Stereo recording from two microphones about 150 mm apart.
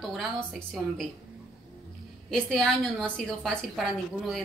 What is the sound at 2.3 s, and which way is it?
A woman's voice, 5° left (ahead or behind).